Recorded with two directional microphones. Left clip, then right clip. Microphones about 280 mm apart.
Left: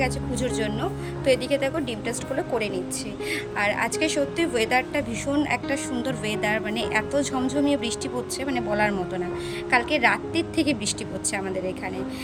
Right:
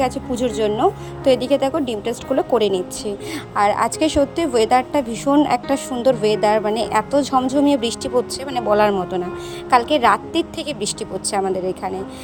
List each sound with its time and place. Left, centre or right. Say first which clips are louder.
0.0 s a woman's voice: right 6 dB; centre